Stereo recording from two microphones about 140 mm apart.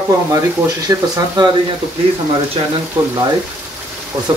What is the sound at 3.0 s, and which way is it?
Speech, 20° right (ahead or behind).